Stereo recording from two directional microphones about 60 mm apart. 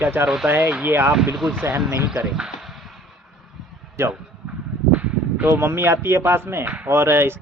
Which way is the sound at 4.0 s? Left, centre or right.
Right.